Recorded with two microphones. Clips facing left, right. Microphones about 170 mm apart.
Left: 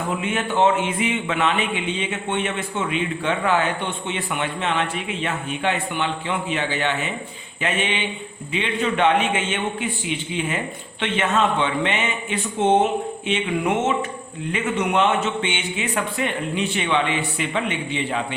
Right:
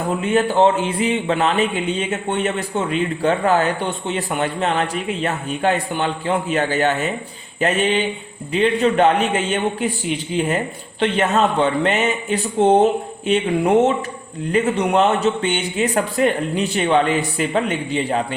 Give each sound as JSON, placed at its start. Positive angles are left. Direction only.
{"t": 0.2, "sound": "a man's voice", "side_deg": -35}